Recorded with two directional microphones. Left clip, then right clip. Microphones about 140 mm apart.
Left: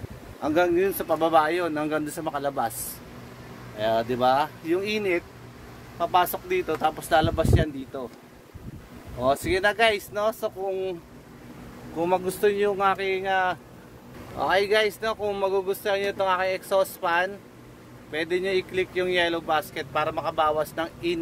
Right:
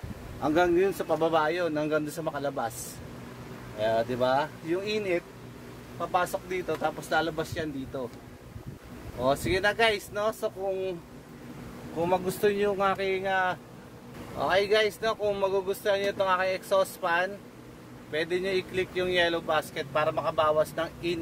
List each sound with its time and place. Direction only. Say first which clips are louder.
0.4 s speech: left 2 dB; 20° right (ahead or behind)
1.2 s speech: left 5 dB; 5° right (ahead or behind)
3.7 s speech: left 2 dB; 5° left (ahead or behind)
9.2 s speech: left 3 dB; 5° left (ahead or behind)
12.0 s speech: left 3 dB; 15° left (ahead or behind)
15.0 s speech: left 1 dB; 5° left (ahead or behind)